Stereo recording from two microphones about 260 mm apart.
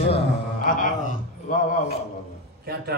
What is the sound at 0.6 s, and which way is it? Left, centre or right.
A man's voice, left.